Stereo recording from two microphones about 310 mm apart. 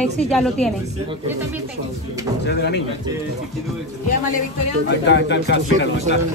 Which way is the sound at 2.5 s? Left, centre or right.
Left.